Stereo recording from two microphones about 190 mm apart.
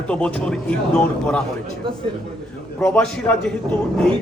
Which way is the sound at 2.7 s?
5° left (ahead or behind).